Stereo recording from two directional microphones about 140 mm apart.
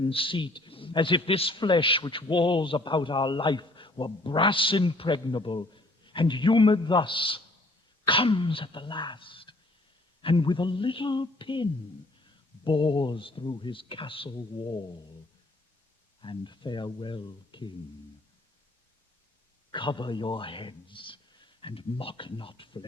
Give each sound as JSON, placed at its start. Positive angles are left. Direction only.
{"t": 0.0, "sound": "a man's voice", "side_deg": 40}
{"t": 16.2, "sound": "a man's voice", "side_deg": 35}
{"t": 19.7, "sound": "a man's voice", "side_deg": 35}